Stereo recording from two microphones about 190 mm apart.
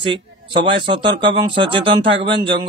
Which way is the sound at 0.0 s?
25° right (ahead or behind).